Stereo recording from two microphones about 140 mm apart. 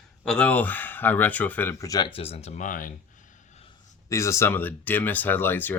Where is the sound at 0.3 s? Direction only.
10° left (ahead or behind).